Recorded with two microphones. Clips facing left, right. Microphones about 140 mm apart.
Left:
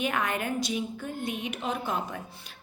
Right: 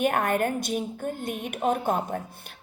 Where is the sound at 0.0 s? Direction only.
50° right (ahead or behind).